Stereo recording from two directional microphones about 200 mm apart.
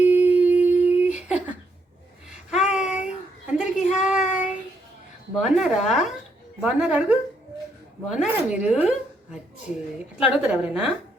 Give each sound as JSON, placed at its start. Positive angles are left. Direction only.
{"t": 0.0, "sound": "humming", "side_deg": -10}
{"t": 2.5, "sound": "child singing", "side_deg": 0}
{"t": 3.6, "sound": "a sound", "side_deg": -5}
{"t": 4.3, "sound": "child singing", "side_deg": 35}
{"t": 5.4, "sound": "speech", "side_deg": -5}
{"t": 10.2, "sound": "speech", "side_deg": -5}